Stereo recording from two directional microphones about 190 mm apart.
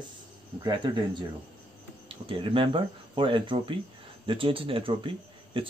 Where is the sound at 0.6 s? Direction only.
25° right (ahead or behind).